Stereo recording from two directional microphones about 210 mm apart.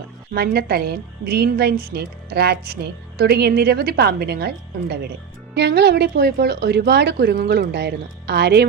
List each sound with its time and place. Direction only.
0.3 s a woman's voice: 50° right (ahead or behind)